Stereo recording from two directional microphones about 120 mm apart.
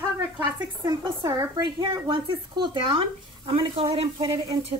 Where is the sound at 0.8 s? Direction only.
35° right (ahead or behind).